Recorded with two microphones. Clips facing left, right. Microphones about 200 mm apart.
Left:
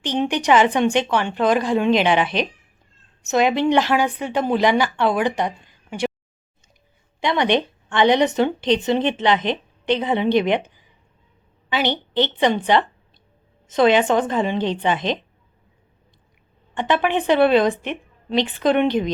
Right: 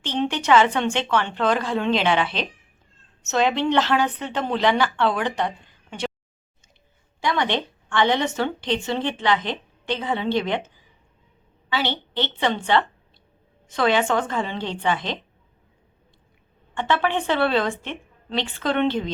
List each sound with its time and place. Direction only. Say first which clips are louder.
0.0 s a woman's voice: left 3 dB; 15° left (ahead or behind)
7.2 s a woman's voice: left 4 dB; 20° left (ahead or behind)
11.7 s a woman's voice: left 4 dB; 15° left (ahead or behind)
16.7 s speech: left 3 dB; 15° left (ahead or behind)